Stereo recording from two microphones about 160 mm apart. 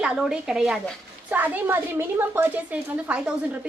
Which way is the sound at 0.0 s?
5° right (ahead or behind).